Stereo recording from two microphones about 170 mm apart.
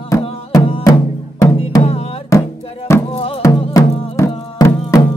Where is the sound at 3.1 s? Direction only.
35° left (ahead or behind).